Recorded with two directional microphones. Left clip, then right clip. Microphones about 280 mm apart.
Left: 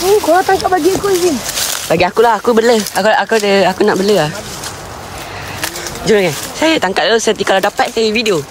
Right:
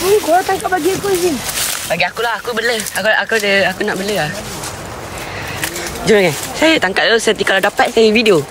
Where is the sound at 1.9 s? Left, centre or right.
Left.